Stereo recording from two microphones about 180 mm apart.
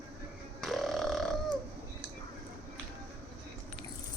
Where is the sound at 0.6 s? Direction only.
Centre (ahead or behind).